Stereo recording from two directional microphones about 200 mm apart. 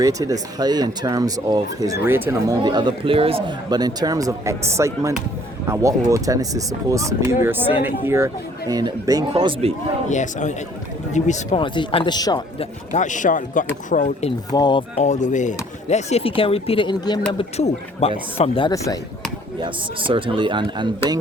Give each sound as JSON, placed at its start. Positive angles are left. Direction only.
{"t": 0.0, "sound": "speech", "side_deg": -15}
{"t": 10.1, "sound": "speech", "side_deg": 35}
{"t": 11.6, "sound": "speech", "side_deg": 25}
{"t": 12.9, "sound": "speech", "side_deg": 40}
{"t": 14.5, "sound": "speech", "side_deg": 20}
{"t": 19.5, "sound": "speech", "side_deg": -25}